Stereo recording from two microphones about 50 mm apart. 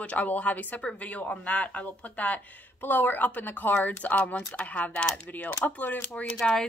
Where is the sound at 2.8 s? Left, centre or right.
Left.